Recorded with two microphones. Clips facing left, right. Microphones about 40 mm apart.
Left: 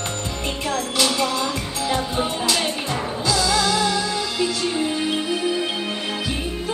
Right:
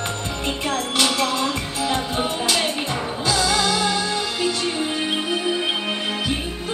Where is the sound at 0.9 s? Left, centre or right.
Right.